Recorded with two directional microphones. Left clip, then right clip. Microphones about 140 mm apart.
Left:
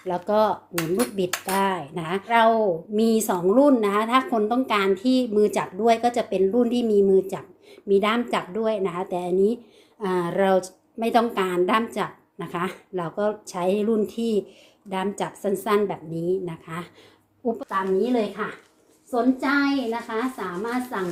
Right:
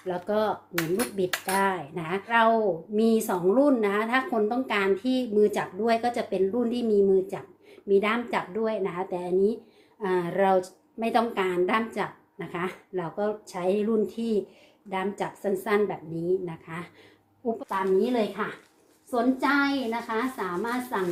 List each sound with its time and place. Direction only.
0.1 s a woman's voice: 40° left (ahead or behind)
17.7 s a woman's voice: centre (ahead or behind)